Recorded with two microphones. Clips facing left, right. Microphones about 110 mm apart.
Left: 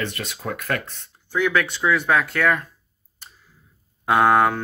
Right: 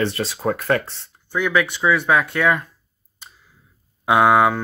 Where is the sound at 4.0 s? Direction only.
10° right (ahead or behind).